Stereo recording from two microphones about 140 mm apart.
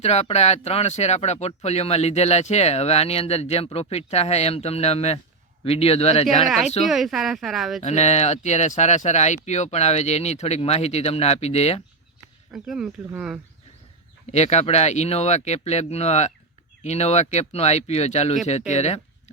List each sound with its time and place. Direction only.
0.0 s speech: 50° left (ahead or behind)
6.8 s speech: centre (ahead or behind)
7.8 s speech: 55° left (ahead or behind)
12.5 s speech: 5° right (ahead or behind)
14.3 s speech: 50° left (ahead or behind)